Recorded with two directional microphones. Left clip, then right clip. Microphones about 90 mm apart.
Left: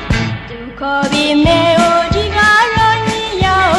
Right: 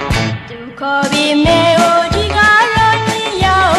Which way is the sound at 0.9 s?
40° left (ahead or behind).